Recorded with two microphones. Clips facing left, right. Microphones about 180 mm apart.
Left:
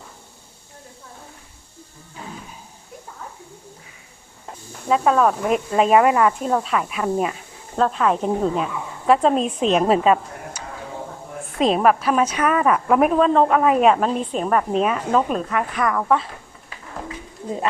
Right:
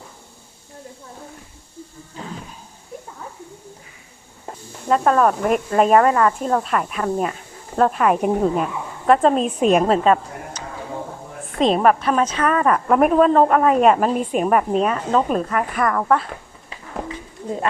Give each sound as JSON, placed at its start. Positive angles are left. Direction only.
{"t": 4.9, "sound": "a woman's voice", "side_deg": 0}
{"t": 6.0, "sound": "speech", "side_deg": 10}
{"t": 6.4, "sound": "a woman's voice", "side_deg": 0}
{"t": 7.8, "sound": "a woman's voice", "side_deg": -10}
{"t": 9.8, "sound": "speech", "side_deg": 5}
{"t": 11.6, "sound": "a woman's voice", "side_deg": 0}
{"t": 14.8, "sound": "a woman's voice", "side_deg": 5}